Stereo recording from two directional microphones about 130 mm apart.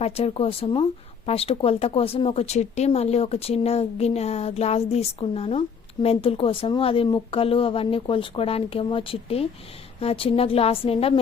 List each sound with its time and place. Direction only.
0.0 s speech: 50° left (ahead or behind)